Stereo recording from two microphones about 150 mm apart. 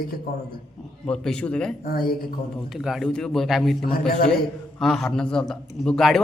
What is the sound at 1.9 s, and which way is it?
Speech, 75° left (ahead or behind).